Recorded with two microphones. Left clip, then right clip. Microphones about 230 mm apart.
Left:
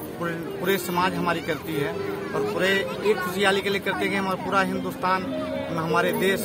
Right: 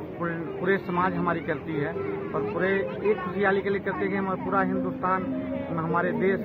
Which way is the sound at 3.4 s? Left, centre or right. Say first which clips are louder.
Left 2 dB; centre.